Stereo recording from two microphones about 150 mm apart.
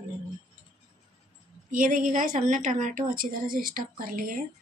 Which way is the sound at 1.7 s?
65° right (ahead or behind).